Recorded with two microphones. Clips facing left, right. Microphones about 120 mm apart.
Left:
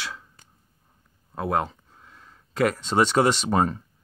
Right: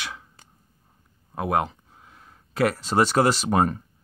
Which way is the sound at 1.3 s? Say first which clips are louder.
Right 1 dB; 15° right (ahead or behind).